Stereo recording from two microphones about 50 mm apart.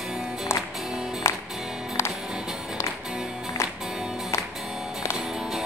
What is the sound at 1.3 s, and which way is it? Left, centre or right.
Music, left.